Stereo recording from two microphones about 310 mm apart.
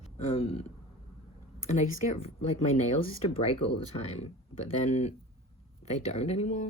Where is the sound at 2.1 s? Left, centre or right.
Left.